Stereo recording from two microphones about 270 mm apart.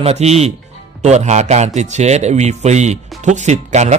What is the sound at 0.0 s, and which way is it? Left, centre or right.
A man's voice, right.